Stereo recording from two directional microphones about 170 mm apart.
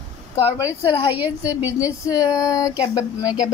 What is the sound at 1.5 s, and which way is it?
Speech, 10° right (ahead or behind).